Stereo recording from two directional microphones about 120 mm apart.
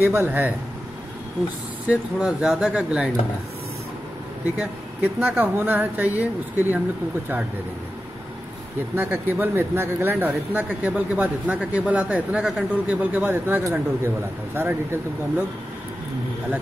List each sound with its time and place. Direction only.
0.0 s speech: 15° right (ahead or behind)
1.9 s speech: 5° right (ahead or behind)
4.6 s speech: 20° right (ahead or behind)
8.9 s speech: 20° right (ahead or behind)